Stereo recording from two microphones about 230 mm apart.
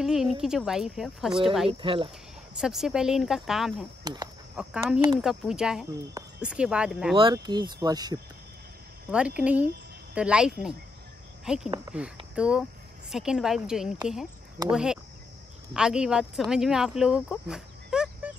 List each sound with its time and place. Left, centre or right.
0.0 s speech: centre
1.7 s speech: right
2.5 s speech: centre
4.0 s speech: centre
4.6 s speech: centre
7.2 s speech: right; by 18.3 s centre